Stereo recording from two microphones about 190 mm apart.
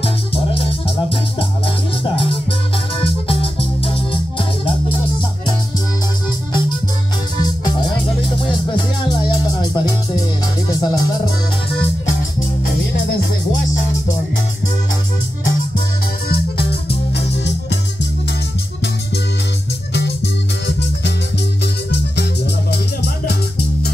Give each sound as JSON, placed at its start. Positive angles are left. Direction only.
{"t": 0.0, "sound": "music", "side_deg": 30}
{"t": 3.0, "sound": "organ", "side_deg": 30}
{"t": 8.7, "sound": "music", "side_deg": 20}
{"t": 19.9, "sound": "music", "side_deg": 65}
{"t": 22.7, "sound": "music", "side_deg": 60}